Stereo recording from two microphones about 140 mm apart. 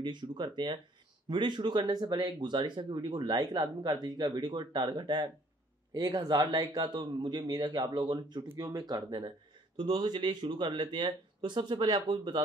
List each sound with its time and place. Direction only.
0.0 s speech: 35° right (ahead or behind)